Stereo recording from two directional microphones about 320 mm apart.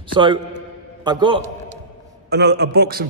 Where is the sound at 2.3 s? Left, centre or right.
Right.